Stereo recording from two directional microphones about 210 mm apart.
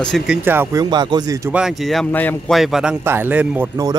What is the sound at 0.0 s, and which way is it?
Speech, centre (ahead or behind).